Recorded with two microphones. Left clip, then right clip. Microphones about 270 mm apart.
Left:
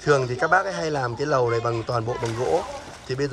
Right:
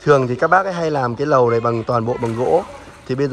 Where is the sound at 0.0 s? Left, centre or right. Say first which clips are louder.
Right 6 dB; centre.